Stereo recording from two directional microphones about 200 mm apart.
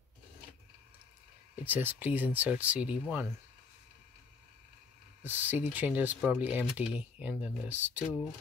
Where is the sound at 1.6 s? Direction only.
10° right (ahead or behind).